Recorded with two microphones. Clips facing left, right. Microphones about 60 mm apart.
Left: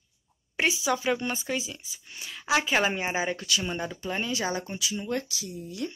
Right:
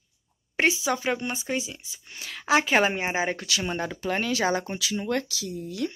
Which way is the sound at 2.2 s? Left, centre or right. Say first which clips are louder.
Right 3 dB; right.